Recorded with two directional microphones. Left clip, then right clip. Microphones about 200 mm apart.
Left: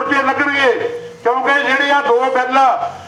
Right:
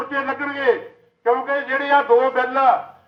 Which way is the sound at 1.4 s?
30° left (ahead or behind).